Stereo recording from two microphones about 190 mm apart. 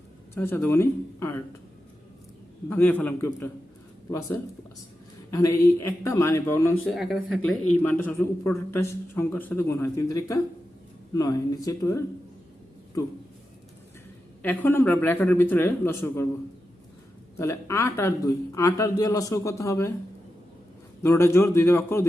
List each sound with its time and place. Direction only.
0.3 s a man's voice: 10° left (ahead or behind)
2.6 s a man's voice: 10° left (ahead or behind)
5.3 s a man's voice: 15° left (ahead or behind)
6.9 s speech: centre (ahead or behind)
7.8 s a man's voice: 10° left (ahead or behind)
13.0 s a man's voice: 15° left (ahead or behind)
14.4 s a man's voice: 10° left (ahead or behind)
17.3 s a man's voice: 15° left (ahead or behind)
21.0 s a man's voice: 15° left (ahead or behind)